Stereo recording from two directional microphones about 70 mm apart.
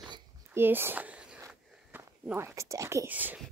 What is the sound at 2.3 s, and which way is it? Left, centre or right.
Speech, right.